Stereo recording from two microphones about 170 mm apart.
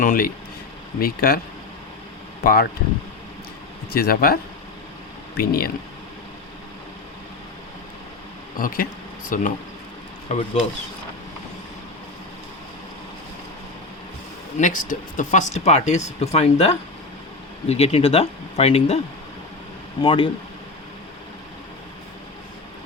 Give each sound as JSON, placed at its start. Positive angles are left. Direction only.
{"t": 0.0, "sound": "speech", "side_deg": 55}
{"t": 2.4, "sound": "speech", "side_deg": 60}
{"t": 3.9, "sound": "speech", "side_deg": 60}
{"t": 5.4, "sound": "speech", "side_deg": 60}
{"t": 8.5, "sound": "speech", "side_deg": 55}
{"t": 14.6, "sound": "speech", "side_deg": 50}
{"t": 20.0, "sound": "speech", "side_deg": 30}